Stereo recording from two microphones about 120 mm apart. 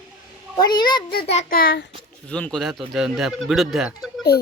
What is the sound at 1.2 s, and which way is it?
Speech, 60° left (ahead or behind).